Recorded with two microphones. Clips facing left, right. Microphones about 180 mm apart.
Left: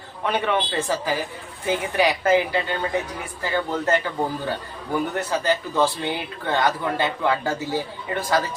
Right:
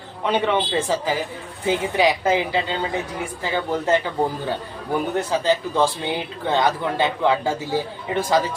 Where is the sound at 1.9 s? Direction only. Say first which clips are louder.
Left 1 dB; 15° right (ahead or behind).